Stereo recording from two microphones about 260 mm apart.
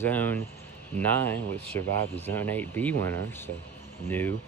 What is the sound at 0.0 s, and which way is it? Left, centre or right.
Speech, centre.